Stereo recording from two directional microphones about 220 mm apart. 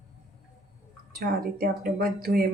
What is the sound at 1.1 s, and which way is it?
Speech, 40° right (ahead or behind).